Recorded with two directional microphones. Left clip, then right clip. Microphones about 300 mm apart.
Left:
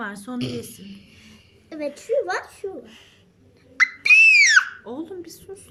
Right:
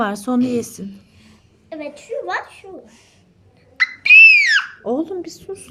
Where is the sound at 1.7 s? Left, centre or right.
Centre.